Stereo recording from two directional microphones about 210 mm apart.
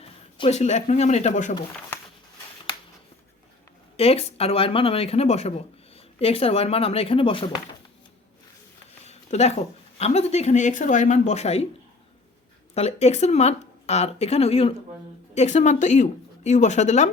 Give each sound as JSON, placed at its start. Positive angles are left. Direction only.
{"t": 0.0, "sound": "speech", "side_deg": 30}
{"t": 3.9, "sound": "speech", "side_deg": 30}
{"t": 9.0, "sound": "a sound", "side_deg": 30}
{"t": 10.0, "sound": "speech", "side_deg": 30}
{"t": 12.7, "sound": "speech", "side_deg": 30}